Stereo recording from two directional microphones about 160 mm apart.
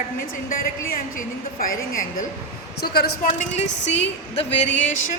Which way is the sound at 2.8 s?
80° left.